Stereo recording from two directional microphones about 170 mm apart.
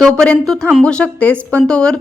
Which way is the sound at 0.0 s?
5° left (ahead or behind).